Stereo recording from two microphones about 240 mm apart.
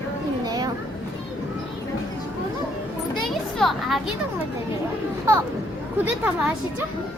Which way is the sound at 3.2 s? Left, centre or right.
Centre.